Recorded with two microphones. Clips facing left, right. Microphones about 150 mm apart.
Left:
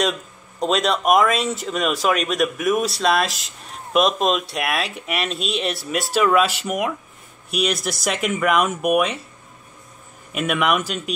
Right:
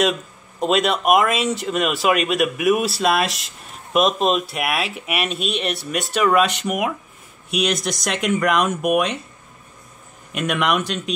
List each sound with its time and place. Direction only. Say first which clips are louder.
0.6 s speech: right 1 dB; centre (ahead or behind)
10.3 s speech: even; 5° left (ahead or behind)